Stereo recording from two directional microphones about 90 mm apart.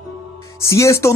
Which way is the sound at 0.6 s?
35° left (ahead or behind).